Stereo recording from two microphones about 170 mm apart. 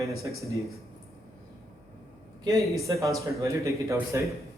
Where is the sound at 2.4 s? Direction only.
20° right (ahead or behind).